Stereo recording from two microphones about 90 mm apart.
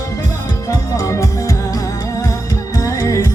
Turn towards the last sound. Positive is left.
turn(degrees=35)  # may be behind; listen again after turning